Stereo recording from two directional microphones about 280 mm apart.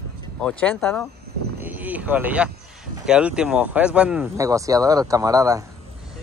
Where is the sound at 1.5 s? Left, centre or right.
Centre.